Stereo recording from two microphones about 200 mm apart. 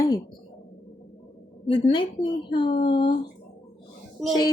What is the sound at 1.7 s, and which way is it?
A woman's voice, 25° left (ahead or behind).